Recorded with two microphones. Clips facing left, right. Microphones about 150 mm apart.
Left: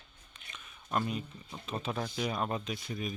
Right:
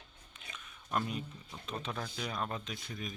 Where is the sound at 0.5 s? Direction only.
Centre (ahead or behind).